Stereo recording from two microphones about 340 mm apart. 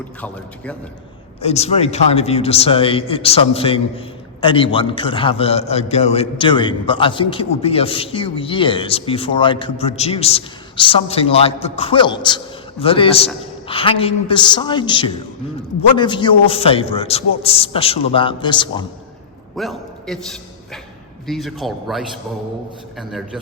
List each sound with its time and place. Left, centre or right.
0.2 s a man's voice: centre
1.4 s a man's voice: centre
19.5 s a man's voice: centre